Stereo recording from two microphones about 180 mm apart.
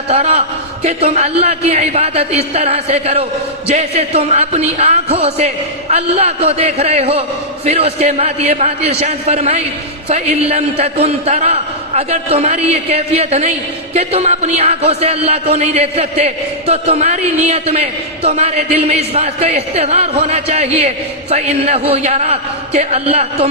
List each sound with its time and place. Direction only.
0.1 s speech: 35° right (ahead or behind)